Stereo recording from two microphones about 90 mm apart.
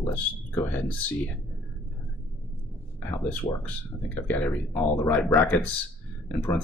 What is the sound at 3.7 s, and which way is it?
Speech, 20° left (ahead or behind).